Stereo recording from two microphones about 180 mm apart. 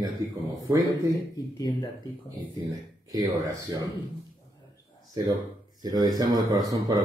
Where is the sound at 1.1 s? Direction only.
20° left (ahead or behind).